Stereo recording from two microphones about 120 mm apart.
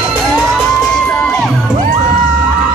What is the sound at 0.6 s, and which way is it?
Music, 5° left (ahead or behind).